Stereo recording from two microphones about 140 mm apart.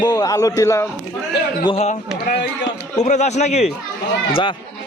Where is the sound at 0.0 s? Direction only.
30° left (ahead or behind).